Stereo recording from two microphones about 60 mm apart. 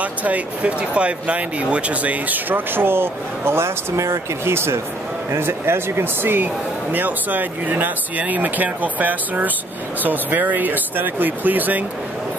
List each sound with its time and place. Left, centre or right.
0.0 s speech: right